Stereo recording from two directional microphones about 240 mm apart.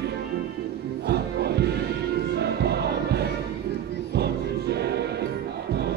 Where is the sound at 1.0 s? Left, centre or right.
Right.